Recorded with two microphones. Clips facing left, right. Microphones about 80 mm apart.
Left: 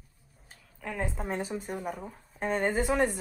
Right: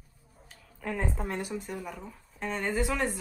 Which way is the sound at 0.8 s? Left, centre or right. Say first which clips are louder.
Right 1 dB; centre.